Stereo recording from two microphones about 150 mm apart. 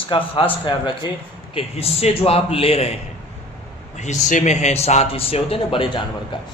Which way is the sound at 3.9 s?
55° left (ahead or behind).